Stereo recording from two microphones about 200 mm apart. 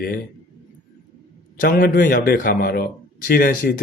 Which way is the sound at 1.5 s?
45° left (ahead or behind).